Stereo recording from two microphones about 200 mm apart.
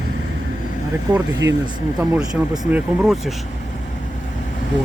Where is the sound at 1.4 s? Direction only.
60° right (ahead or behind).